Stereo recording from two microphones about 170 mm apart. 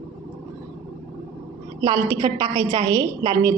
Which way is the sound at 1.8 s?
20° right (ahead or behind).